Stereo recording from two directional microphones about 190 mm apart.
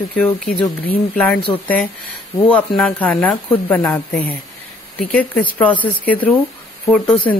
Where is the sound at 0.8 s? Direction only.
5° left (ahead or behind).